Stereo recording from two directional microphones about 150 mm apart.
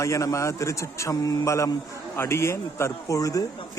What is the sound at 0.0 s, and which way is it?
A man's voice, 20° left (ahead or behind).